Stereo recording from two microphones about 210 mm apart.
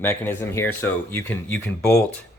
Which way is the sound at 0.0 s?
10° left (ahead or behind).